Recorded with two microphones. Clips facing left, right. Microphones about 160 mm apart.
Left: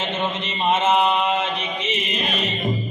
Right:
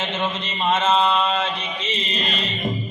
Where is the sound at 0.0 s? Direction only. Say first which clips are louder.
Left 1 dB; 20° left (ahead or behind).